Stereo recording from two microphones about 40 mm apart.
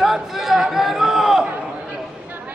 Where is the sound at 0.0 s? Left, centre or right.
Centre.